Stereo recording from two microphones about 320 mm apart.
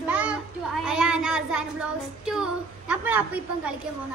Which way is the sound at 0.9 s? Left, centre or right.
Centre.